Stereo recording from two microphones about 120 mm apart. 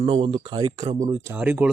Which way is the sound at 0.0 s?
50° right (ahead or behind).